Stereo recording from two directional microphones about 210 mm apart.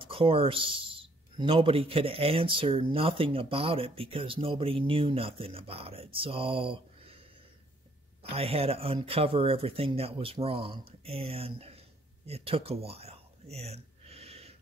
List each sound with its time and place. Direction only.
0.0 s a man's voice: 25° right (ahead or behind)
8.2 s a man's voice: 30° right (ahead or behind)
12.3 s a sound: 30° right (ahead or behind)